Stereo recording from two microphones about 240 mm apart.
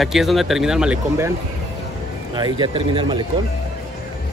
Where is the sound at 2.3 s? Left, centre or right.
Centre.